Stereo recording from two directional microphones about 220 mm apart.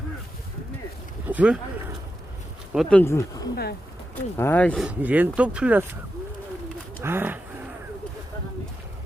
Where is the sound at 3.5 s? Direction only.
45° left (ahead or behind).